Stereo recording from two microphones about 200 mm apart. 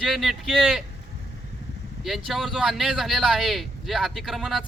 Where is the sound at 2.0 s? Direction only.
Centre (ahead or behind).